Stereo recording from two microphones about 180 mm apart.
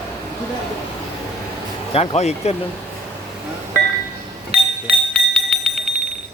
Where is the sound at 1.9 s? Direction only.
35° left (ahead or behind).